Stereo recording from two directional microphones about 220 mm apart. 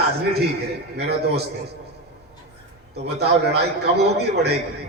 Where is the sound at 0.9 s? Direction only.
45° right (ahead or behind).